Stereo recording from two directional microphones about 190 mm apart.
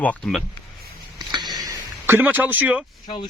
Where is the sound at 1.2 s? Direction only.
20° right (ahead or behind).